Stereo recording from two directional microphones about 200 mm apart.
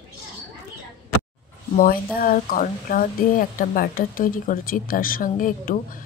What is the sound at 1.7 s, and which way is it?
Speech, 45° left (ahead or behind).